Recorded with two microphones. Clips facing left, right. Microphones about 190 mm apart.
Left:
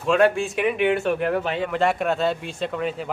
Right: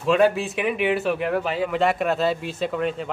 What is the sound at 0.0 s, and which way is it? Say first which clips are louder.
Speech: even; centre (ahead or behind).